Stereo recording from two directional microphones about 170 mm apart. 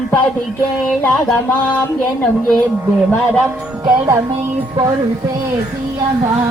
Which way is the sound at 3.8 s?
15° right (ahead or behind).